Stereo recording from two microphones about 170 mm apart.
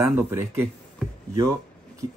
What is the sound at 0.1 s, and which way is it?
Speech, 15° right (ahead or behind).